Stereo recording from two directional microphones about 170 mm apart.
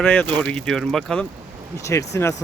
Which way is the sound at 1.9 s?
15° left (ahead or behind).